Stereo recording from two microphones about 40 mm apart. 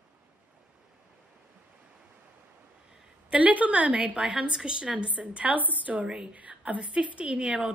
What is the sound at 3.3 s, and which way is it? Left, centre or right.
Speech, right.